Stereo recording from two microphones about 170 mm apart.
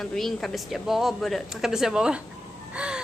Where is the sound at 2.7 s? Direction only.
5° right (ahead or behind).